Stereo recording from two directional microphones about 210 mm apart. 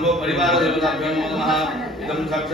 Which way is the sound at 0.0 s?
Centre (ahead or behind).